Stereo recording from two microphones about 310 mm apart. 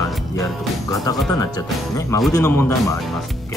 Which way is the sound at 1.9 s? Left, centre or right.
Centre.